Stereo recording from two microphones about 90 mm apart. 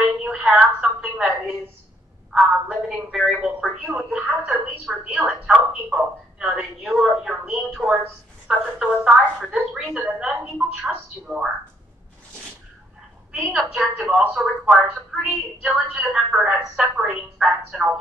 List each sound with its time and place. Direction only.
0.2 s a sound: 5° right (ahead or behind)
2.3 s a woman's voice: 5° right (ahead or behind)
11.3 s speech: 20° right (ahead or behind)
13.3 s speech: 5° right (ahead or behind)